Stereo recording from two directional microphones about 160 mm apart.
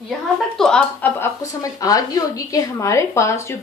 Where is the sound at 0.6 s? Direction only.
5° left (ahead or behind).